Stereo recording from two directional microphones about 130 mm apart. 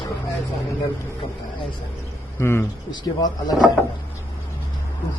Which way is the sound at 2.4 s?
20° left (ahead or behind).